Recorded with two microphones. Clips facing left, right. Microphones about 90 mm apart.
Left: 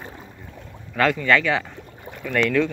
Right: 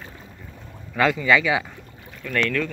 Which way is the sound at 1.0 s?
5° right (ahead or behind).